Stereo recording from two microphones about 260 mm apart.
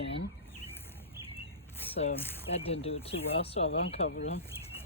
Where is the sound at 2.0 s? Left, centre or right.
Left.